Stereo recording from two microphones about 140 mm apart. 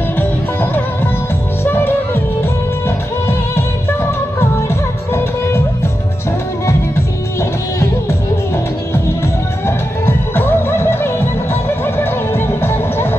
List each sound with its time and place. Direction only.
0.2 s music: 15° left (ahead or behind)
4.4 s music: 20° left (ahead or behind)
9.7 s music: 15° left (ahead or behind)